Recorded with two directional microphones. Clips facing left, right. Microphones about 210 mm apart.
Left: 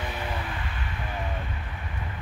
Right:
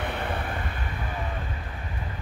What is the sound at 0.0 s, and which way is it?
Vehicle, 60° right (ahead or behind).